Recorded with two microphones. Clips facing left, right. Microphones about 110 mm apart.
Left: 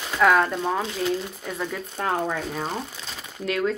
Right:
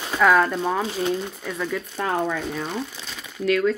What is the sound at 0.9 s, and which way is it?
Speech, 35° right (ahead or behind).